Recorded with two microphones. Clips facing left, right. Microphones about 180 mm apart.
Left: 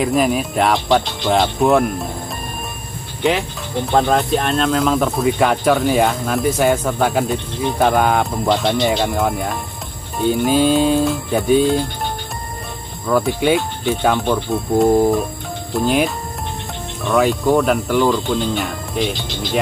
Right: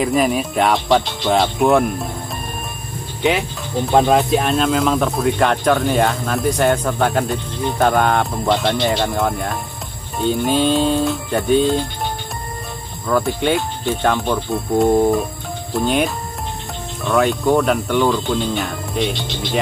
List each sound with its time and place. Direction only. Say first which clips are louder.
0.0 s speech: even; centre (ahead or behind)
3.2 s speech: even; centre (ahead or behind)
13.0 s speech: left 2 dB; 5° left (ahead or behind)